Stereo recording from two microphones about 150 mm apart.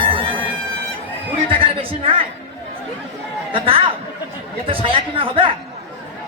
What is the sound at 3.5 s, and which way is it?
Speech, 35° right (ahead or behind).